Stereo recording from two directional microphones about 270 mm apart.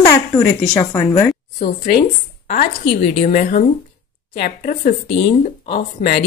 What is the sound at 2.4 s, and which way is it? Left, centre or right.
Speech, left.